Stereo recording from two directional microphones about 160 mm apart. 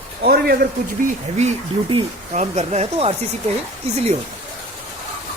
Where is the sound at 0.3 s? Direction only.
70° right (ahead or behind).